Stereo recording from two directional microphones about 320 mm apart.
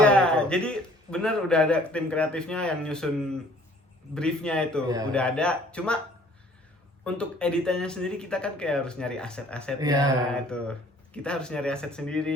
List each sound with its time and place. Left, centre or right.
0.0 s a man's voice: centre
7.0 s speech: centre
9.8 s a sound: centre
10.3 s speech: centre